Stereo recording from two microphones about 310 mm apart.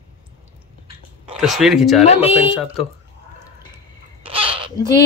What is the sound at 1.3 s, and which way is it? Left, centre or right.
Speech, centre.